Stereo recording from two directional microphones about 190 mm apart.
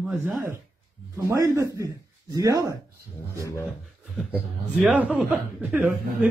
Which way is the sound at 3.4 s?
15° left (ahead or behind).